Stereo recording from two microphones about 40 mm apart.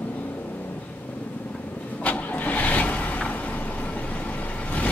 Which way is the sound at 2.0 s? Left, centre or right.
Left.